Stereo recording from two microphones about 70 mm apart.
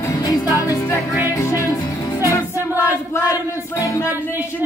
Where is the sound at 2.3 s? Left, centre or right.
Left.